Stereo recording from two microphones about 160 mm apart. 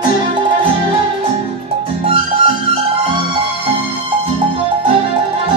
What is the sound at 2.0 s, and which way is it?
Music, 35° right (ahead or behind).